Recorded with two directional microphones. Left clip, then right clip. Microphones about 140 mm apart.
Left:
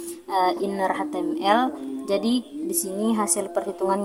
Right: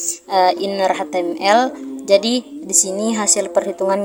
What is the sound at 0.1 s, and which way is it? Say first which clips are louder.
A woman's voice: right 7 dB; 45° right (ahead or behind).